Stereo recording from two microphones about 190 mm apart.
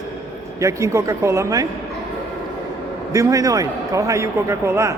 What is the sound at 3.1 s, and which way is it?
A man's voice, 15° right (ahead or behind).